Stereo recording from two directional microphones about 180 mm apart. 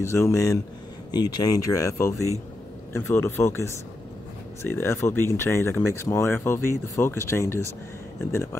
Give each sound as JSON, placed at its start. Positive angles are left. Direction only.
{"t": 0.0, "sound": "speech", "side_deg": 15}